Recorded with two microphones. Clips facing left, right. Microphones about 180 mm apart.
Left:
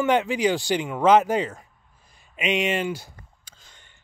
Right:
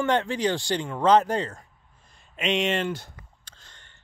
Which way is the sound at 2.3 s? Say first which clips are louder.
Left 1 dB; 5° left (ahead or behind).